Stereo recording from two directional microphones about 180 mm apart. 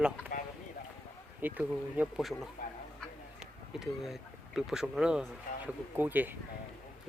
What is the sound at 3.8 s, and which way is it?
Speech, centre (ahead or behind).